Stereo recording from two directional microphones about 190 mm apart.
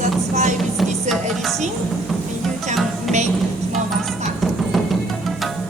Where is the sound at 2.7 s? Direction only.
Centre (ahead or behind).